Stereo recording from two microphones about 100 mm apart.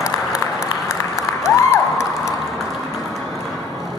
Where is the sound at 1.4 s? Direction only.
30° left (ahead or behind).